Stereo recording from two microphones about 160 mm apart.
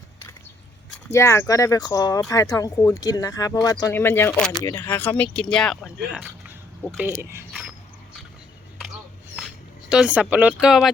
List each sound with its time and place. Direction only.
1.1 s speech: 15° left (ahead or behind)
6.1 s a sound: 5° right (ahead or behind)
7.2 s speech: 15° right (ahead or behind)
9.9 s speech: 5° right (ahead or behind)